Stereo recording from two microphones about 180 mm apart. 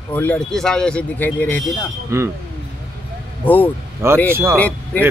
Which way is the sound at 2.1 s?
15° right (ahead or behind).